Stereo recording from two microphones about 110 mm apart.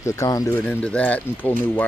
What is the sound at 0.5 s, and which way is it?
Speech, 15° left (ahead or behind).